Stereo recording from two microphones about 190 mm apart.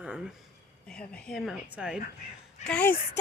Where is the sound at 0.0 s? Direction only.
5° right (ahead or behind).